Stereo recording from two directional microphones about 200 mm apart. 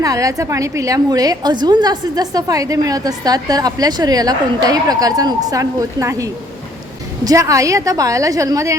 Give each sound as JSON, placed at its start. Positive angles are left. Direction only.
{"t": 0.0, "sound": "a woman's voice", "side_deg": -15}